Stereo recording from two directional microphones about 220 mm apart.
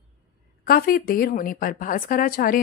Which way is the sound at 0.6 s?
40° left (ahead or behind).